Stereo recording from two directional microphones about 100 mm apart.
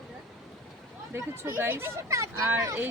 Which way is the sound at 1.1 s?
20° right (ahead or behind).